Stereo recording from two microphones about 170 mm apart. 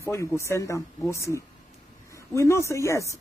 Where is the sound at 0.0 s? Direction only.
15° left (ahead or behind).